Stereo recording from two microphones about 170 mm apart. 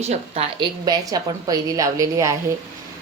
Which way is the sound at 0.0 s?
40° right (ahead or behind).